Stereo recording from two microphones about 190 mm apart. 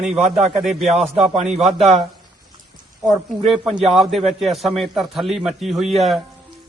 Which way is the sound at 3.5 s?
Centre (ahead or behind).